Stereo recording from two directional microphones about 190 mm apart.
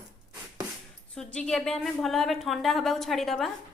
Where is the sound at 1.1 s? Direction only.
5° left (ahead or behind).